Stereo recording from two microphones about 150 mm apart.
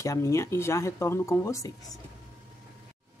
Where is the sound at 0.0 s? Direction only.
20° left (ahead or behind).